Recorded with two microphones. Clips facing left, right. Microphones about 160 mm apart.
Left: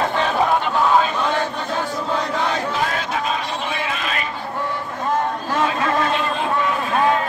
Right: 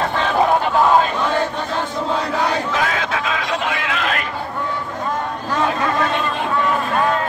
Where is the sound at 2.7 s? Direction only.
90° right.